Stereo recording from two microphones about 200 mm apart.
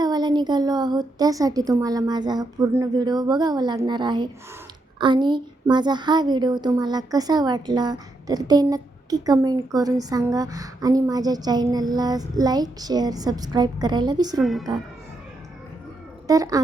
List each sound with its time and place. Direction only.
0.0 s a woman's voice: 20° right (ahead or behind)
14.4 s speech: centre (ahead or behind)
16.2 s speech: 15° right (ahead or behind)